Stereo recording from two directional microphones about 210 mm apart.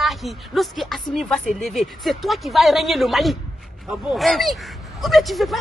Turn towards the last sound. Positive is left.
turn(degrees=0)  # may be behind; listen again after turning